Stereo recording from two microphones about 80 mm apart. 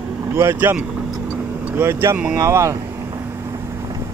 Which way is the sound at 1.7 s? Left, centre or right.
Right.